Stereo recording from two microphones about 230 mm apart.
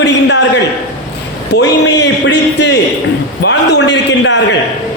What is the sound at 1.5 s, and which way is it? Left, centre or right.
A man's voice, left.